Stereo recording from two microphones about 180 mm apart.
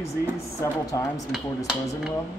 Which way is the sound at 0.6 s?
20° left (ahead or behind).